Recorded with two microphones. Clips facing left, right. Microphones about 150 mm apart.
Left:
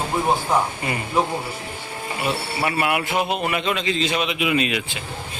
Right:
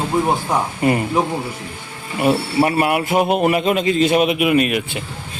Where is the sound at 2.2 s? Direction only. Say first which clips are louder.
Right 9 dB; 40° right (ahead or behind).